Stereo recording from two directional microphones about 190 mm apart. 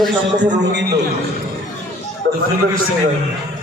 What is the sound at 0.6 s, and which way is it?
Speech, 65° right (ahead or behind).